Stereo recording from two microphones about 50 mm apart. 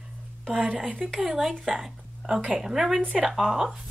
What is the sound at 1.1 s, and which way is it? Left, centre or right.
Speech, centre.